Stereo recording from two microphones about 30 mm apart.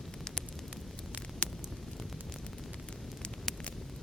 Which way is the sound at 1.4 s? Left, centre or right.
Left.